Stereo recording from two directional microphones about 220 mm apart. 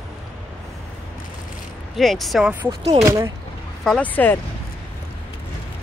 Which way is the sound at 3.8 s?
5° left (ahead or behind).